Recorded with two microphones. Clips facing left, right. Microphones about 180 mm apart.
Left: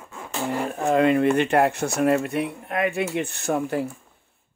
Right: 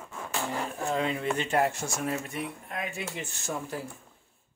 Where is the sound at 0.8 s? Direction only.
65° left (ahead or behind).